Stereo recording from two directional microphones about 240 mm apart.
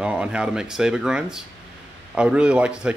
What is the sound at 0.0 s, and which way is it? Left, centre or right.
Speech, centre.